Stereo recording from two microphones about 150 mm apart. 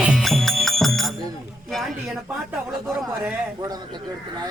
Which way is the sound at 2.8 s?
15° right (ahead or behind).